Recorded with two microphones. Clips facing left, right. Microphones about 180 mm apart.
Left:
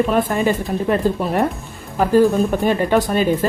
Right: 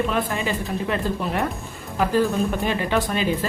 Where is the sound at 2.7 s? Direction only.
45° left (ahead or behind).